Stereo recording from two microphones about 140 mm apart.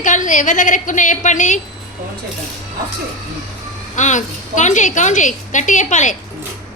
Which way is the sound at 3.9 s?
60° left (ahead or behind).